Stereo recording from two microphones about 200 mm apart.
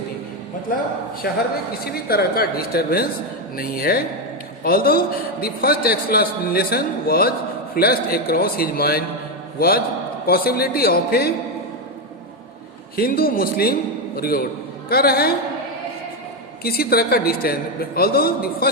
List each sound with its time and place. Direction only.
1.2 s a man's voice: 50° left (ahead or behind)
13.0 s a man's voice: 45° left (ahead or behind)
16.6 s a man's voice: 50° left (ahead or behind)